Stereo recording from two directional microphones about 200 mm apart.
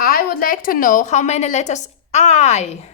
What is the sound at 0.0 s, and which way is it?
A woman's voice, 45° left (ahead or behind).